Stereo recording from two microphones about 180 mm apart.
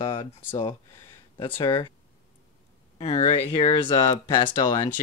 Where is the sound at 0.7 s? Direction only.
20° left (ahead or behind).